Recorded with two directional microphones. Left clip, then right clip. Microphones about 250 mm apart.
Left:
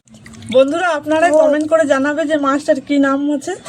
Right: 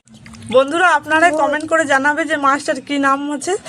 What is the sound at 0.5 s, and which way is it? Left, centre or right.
A man's voice, right.